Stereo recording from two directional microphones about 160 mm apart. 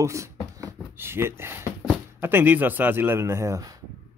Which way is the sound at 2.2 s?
15° right (ahead or behind).